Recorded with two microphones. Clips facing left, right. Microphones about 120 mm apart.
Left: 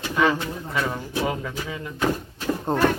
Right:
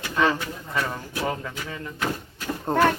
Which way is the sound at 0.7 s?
10° left (ahead or behind).